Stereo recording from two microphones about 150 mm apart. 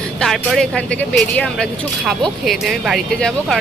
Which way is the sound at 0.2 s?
Centre (ahead or behind).